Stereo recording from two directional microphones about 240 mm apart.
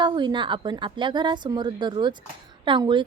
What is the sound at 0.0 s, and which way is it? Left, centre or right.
Speech, centre.